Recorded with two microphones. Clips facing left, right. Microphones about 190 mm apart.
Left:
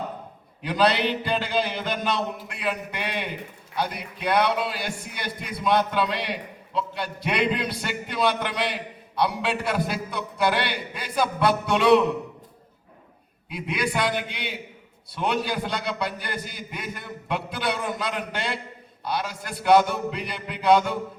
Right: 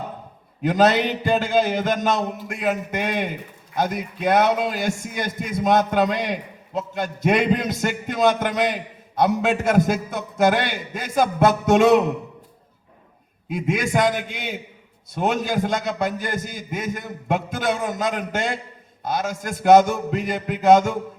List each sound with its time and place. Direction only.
0.6 s a man's voice: 45° right (ahead or behind)
13.5 s a man's voice: 45° right (ahead or behind)